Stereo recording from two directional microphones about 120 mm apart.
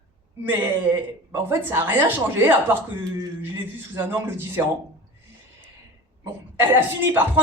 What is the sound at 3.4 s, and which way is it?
A man's voice, 15° right (ahead or behind).